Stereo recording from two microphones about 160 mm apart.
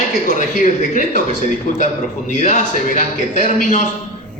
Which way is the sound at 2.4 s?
50° left (ahead or behind).